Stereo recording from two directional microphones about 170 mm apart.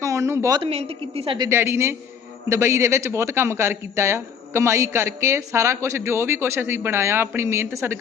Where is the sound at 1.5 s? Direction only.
15° right (ahead or behind).